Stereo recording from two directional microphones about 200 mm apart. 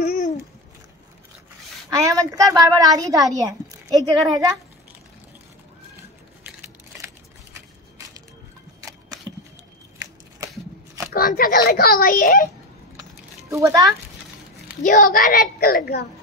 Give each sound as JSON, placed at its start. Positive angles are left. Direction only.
{"t": 0.0, "sound": "a sound", "side_deg": 45}
{"t": 1.9, "sound": "a woman's voice", "side_deg": -15}
{"t": 11.1, "sound": "a child's voice", "side_deg": 45}
{"t": 13.5, "sound": "a woman's voice", "side_deg": -15}
{"t": 14.8, "sound": "a child's voice", "side_deg": 40}